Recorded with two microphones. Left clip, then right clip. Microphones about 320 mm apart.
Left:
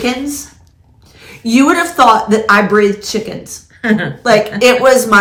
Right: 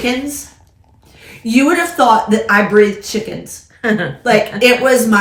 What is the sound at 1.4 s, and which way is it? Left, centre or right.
Speech, centre.